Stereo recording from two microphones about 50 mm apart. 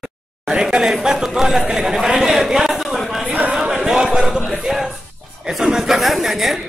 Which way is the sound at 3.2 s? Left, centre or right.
Right.